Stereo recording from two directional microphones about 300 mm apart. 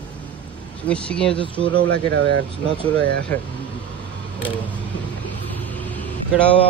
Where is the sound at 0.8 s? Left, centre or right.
Centre.